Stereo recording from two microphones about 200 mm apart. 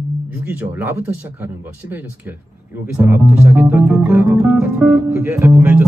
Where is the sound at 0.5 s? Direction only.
10° right (ahead or behind).